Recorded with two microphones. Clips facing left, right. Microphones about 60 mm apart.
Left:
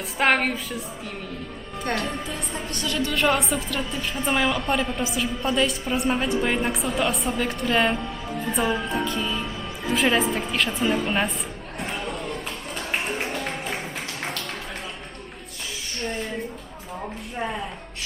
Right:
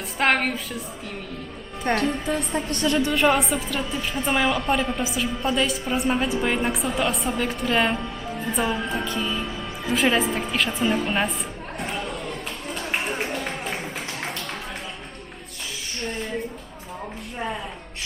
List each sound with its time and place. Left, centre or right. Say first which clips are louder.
0.2 s a woman's voice: even; centre
1.8 s a woman's voice: right 4 dB; right
2.6 s a woman's voice: right 5 dB; right
3.1 s a woman's voice: left 2 dB; centre
11.8 s chatter: even; centre
12.7 s a sound: right 1 dB; centre
17.3 s a woman's voice: even; centre